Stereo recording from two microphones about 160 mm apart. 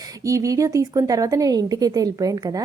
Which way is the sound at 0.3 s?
20° right (ahead or behind).